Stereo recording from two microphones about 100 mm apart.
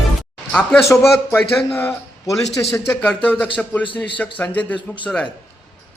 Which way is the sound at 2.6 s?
25° left (ahead or behind).